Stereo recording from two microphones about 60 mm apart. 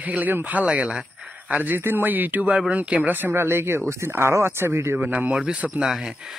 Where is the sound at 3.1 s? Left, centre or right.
Right.